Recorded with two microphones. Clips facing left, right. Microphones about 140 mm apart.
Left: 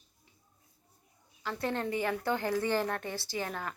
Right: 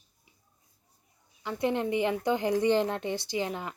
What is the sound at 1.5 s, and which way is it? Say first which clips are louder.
A woman's voice: right 5 dB; 20° right (ahead or behind).